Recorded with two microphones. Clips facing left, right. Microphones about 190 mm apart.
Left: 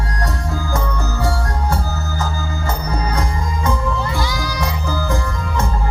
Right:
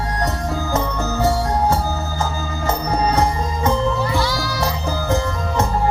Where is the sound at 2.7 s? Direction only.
25° right (ahead or behind).